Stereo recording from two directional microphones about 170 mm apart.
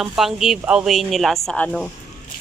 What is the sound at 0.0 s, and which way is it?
Speech, centre (ahead or behind).